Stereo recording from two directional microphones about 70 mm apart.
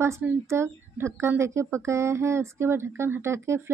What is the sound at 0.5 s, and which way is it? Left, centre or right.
A woman's voice, right.